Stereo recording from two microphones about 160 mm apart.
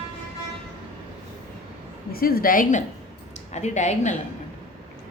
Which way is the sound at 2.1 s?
65° left (ahead or behind).